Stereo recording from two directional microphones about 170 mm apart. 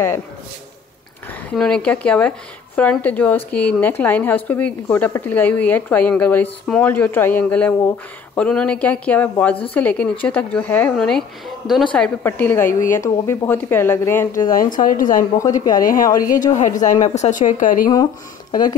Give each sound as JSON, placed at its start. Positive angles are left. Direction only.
{"t": 1.5, "sound": "speech", "side_deg": 5}
{"t": 14.5, "sound": "a woman's voice", "side_deg": 55}
{"t": 15.3, "sound": "a woman's voice", "side_deg": 20}
{"t": 15.8, "sound": "a woman's voice", "side_deg": 55}